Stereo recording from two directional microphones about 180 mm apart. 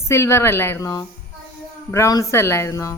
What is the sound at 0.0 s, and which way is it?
A woman's voice, 15° left (ahead or behind).